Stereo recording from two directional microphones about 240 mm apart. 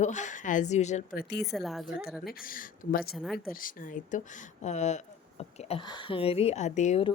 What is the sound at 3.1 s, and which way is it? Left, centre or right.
Speech, centre.